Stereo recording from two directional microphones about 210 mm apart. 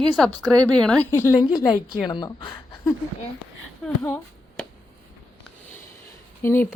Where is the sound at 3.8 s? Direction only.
5° left (ahead or behind).